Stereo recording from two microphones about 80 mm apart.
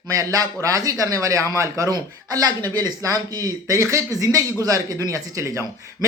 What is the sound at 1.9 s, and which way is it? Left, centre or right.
A man's voice, right.